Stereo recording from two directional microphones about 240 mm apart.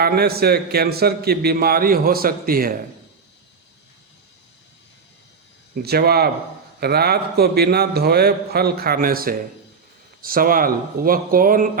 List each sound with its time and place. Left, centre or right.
0.0 s a man's voice: right
5.7 s a man's voice: right